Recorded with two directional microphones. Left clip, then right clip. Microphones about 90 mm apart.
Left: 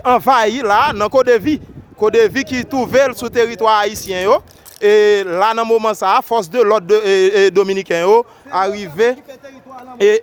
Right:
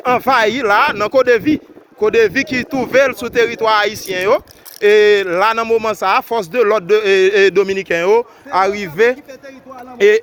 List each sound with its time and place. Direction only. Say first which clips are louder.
0.0 s speech: left 1 dB; 50° left (ahead or behind)
0.6 s speech: even; 40° left (ahead or behind)
0.9 s speech: even; 55° left (ahead or behind)
3.0 s speech: right 1 dB; 45° left (ahead or behind)
5.3 s speech: even; 35° left (ahead or behind); by 8.2 s 70° left (ahead or behind)
8.4 s a man's voice: right 2 dB; 15° left (ahead or behind)